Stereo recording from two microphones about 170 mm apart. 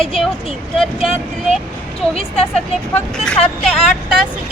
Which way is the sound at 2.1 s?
35° left (ahead or behind).